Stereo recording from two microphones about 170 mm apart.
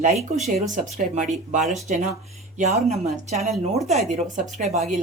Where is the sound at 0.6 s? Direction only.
50° right (ahead or behind).